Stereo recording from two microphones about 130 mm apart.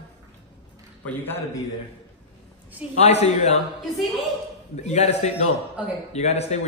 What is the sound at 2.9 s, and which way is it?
Speech, 55° left (ahead or behind).